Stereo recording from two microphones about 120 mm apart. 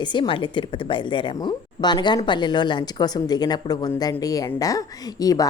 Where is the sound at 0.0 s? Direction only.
40° left (ahead or behind).